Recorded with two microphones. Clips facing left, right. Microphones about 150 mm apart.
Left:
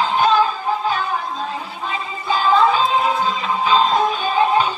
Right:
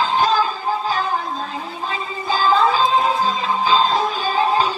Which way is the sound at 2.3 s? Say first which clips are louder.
Left 1 dB; 35° right (ahead or behind).